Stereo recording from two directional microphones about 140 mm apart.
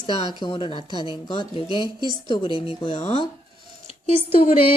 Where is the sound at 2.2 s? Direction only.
35° left (ahead or behind).